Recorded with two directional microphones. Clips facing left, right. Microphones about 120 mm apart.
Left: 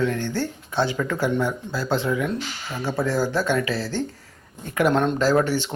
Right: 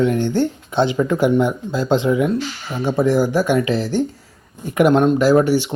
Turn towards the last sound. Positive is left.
turn(degrees=-10)  # may be behind; listen again after turning